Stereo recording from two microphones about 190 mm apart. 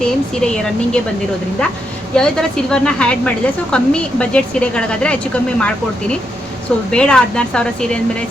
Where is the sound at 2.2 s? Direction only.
5° left (ahead or behind).